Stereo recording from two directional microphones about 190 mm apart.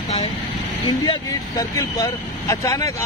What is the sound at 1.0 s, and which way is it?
Speech, 20° left (ahead or behind).